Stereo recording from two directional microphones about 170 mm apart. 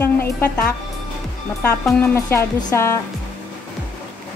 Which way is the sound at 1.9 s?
15° left (ahead or behind).